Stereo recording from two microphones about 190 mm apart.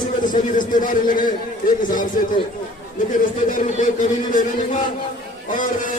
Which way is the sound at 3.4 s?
40° left (ahead or behind).